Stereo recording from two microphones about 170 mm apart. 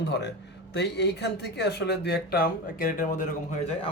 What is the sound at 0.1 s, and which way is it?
A woman's voice, 90° left.